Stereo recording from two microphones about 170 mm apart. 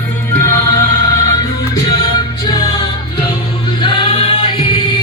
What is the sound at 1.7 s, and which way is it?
Music, 25° left (ahead or behind).